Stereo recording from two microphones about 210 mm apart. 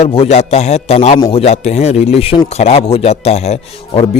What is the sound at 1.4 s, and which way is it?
Speech, 30° left (ahead or behind).